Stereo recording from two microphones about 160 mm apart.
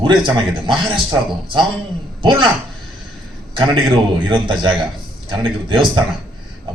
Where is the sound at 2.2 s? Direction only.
30° right (ahead or behind).